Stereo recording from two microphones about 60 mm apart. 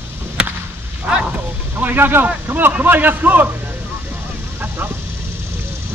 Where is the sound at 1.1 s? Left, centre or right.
Centre.